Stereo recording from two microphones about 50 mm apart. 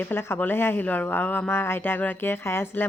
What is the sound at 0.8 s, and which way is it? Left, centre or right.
Speech, left.